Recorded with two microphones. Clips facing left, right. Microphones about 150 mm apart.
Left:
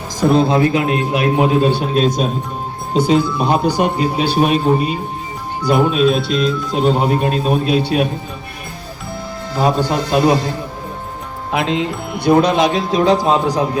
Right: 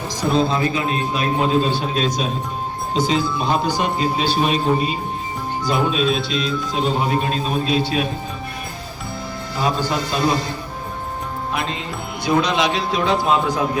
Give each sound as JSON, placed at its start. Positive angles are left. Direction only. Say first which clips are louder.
{"t": 0.2, "sound": "a man's voice", "louder": "left 6 dB", "side_deg": 60}
{"t": 5.6, "sound": "a man's voice", "louder": "left 6 dB", "side_deg": 55}
{"t": 6.0, "sound": "speech", "louder": "left 6 dB", "side_deg": 0}
{"t": 6.7, "sound": "a man's voice", "louder": "left 5 dB", "side_deg": 55}
{"t": 9.6, "sound": "a man's voice", "louder": "left 5 dB", "side_deg": 55}
{"t": 11.5, "sound": "music", "louder": "left 10 dB", "side_deg": 90}
{"t": 12.2, "sound": "a man's voice", "louder": "left 6 dB", "side_deg": 55}